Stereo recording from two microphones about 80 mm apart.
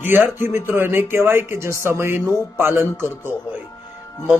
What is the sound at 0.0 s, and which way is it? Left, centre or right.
Music, right.